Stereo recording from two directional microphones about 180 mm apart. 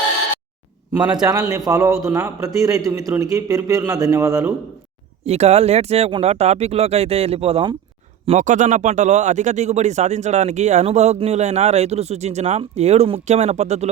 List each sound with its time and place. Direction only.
1.1 s a man's voice: 20° right (ahead or behind)
5.2 s speech: 35° right (ahead or behind)
8.3 s speech: 45° right (ahead or behind)